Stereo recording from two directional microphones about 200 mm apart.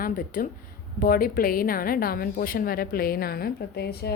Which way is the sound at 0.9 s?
45° left (ahead or behind).